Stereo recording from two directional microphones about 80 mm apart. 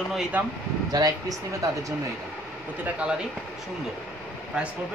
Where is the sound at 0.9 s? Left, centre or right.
Right.